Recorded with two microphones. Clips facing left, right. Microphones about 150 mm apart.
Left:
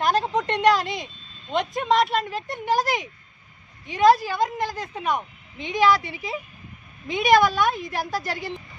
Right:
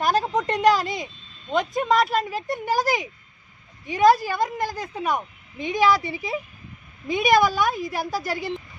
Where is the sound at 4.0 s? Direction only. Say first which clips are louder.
Even; 25° left (ahead or behind).